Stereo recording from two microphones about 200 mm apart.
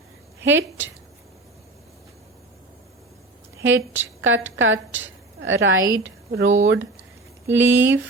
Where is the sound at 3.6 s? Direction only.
70° right (ahead or behind).